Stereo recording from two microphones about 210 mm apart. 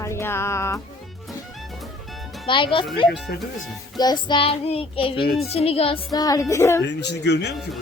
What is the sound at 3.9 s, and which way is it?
Speech, 20° left (ahead or behind).